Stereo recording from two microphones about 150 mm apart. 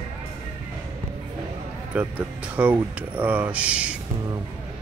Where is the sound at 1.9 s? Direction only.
10° right (ahead or behind).